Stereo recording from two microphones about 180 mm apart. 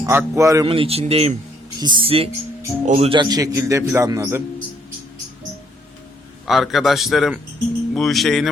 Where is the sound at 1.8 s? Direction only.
25° right (ahead or behind).